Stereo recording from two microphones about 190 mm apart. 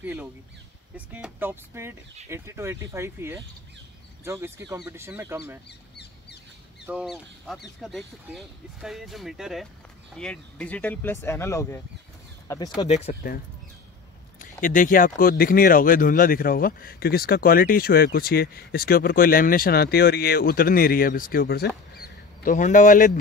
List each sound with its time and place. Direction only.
0.0 s speech: 10° right (ahead or behind)
5.7 s bird: 60° left (ahead or behind)
6.9 s speech: 5° right (ahead or behind); by 12.8 s 20° left (ahead or behind)
12.8 s speech: 35° left (ahead or behind)
13.1 s speech: 50° left (ahead or behind)
14.4 s speech: 45° left (ahead or behind)